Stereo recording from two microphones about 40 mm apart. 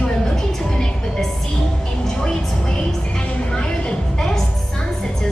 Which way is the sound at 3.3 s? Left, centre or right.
Left.